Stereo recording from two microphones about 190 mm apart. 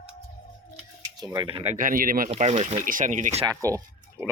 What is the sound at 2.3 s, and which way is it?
Speech, 35° right (ahead or behind).